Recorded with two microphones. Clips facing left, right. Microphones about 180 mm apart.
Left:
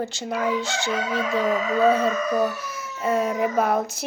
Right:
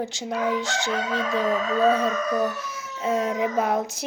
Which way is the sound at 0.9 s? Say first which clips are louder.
Left 2 dB; 15° left (ahead or behind).